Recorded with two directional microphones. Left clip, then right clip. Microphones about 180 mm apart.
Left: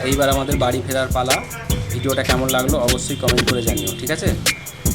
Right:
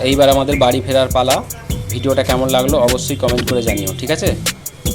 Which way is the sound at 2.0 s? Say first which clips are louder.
Right 4 dB; 10° right (ahead or behind).